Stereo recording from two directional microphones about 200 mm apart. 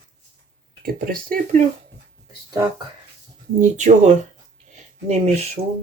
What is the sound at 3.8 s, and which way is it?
Speech, 40° right (ahead or behind).